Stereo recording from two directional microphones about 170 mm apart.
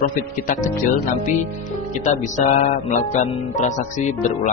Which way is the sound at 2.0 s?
45° left (ahead or behind).